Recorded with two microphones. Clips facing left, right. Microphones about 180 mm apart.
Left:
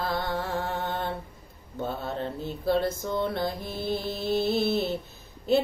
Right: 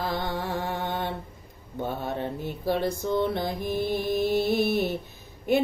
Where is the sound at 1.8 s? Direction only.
15° right (ahead or behind).